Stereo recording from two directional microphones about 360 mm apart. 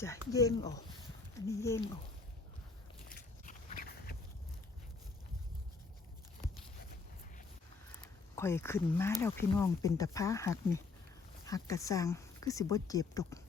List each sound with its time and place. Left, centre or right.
0.0 s speech: centre
3.2 s a sound: left
8.0 s speech: centre